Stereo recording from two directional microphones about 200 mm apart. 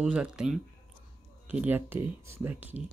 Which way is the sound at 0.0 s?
5° right (ahead or behind).